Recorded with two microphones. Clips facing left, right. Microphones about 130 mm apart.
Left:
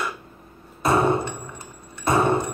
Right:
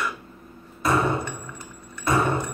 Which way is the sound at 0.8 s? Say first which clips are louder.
Left 3 dB; 30° left (ahead or behind).